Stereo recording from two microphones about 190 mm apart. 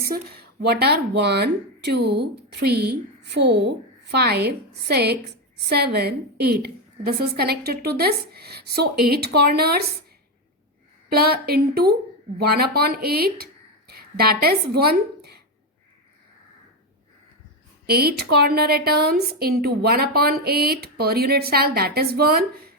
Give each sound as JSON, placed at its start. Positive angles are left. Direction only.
{"t": 0.0, "sound": "a woman's voice", "side_deg": -55}
{"t": 11.1, "sound": "a woman's voice", "side_deg": -55}
{"t": 17.8, "sound": "a woman's voice", "side_deg": -55}